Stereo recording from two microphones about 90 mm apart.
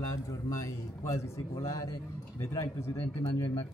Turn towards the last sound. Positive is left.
turn(degrees=40)  # may be behind; listen again after turning